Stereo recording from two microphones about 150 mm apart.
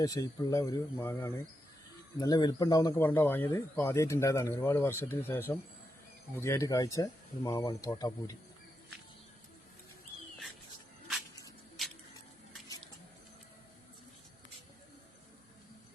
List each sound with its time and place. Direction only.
0.0 s speech: 25° left (ahead or behind)
3.0 s speech: 15° left (ahead or behind)
11.8 s a sound: centre (ahead or behind)